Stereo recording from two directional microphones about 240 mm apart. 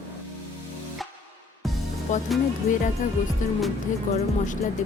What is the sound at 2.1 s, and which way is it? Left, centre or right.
Speech, left.